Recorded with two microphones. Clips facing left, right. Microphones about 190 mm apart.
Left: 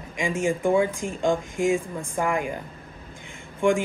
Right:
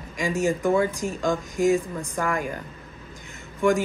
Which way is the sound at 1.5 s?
40° right (ahead or behind).